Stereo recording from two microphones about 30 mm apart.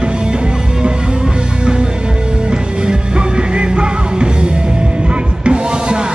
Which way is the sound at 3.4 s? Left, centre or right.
Right.